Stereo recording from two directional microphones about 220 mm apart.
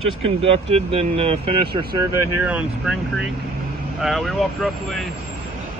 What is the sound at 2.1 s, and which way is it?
Speech, 5° right (ahead or behind).